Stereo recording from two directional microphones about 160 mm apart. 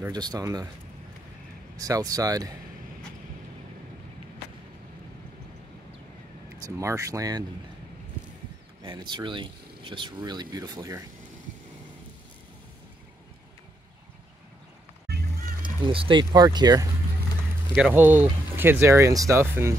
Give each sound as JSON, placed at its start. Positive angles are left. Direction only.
{"t": 0.1, "sound": "speech", "side_deg": -25}
{"t": 1.8, "sound": "speech", "side_deg": -20}
{"t": 6.6, "sound": "speech", "side_deg": -20}
{"t": 9.1, "sound": "speech", "side_deg": -30}
{"t": 15.6, "sound": "speech", "side_deg": -30}
{"t": 17.9, "sound": "speech", "side_deg": -15}